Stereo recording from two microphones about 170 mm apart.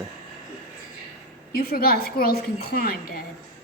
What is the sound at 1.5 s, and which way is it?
A woman's voice, 60° left (ahead or behind).